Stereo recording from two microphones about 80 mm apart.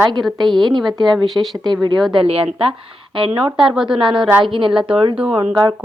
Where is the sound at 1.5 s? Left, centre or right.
Right.